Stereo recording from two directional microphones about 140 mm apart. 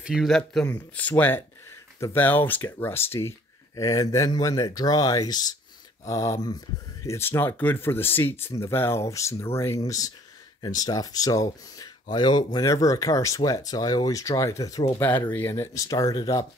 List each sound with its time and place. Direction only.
0.0 s speech: 5° right (ahead or behind); by 15.0 s 25° left (ahead or behind)
15.0 s speech: 15° left (ahead or behind)